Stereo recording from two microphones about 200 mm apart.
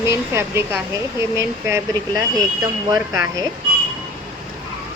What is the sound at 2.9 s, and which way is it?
Speech, 15° right (ahead or behind).